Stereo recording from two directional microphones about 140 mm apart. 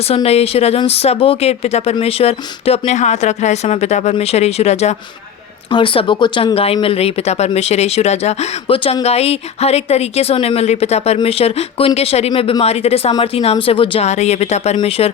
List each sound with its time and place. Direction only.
0.1 s speech: 45° left (ahead or behind)
5.7 s speech: 40° left (ahead or behind)